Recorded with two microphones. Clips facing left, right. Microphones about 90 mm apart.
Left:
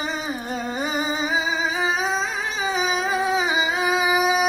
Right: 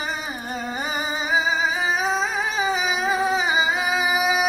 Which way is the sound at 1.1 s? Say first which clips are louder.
Right 1 dB; centre (ahead or behind).